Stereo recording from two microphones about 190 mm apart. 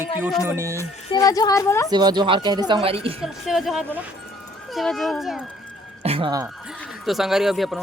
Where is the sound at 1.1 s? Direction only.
20° left (ahead or behind).